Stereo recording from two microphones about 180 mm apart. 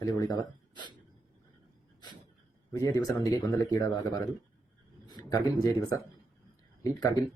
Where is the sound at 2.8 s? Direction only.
20° left (ahead or behind).